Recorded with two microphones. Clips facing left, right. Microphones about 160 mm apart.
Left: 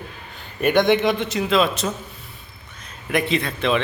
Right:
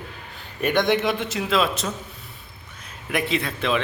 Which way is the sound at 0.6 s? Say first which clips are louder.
Left 4 dB; centre (ahead or behind).